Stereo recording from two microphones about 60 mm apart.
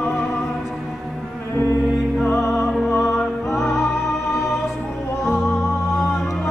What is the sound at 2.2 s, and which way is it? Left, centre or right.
Music, centre.